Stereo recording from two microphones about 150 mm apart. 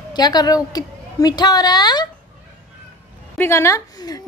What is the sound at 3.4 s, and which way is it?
Speech, 15° left (ahead or behind).